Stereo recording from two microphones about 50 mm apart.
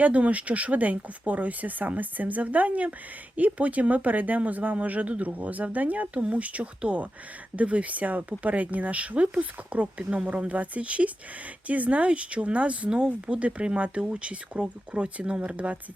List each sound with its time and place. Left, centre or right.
0.0 s speech: right